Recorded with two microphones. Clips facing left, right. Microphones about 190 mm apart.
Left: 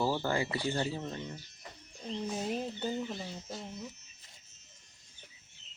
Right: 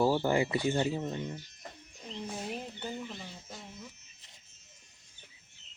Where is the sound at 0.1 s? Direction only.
15° right (ahead or behind).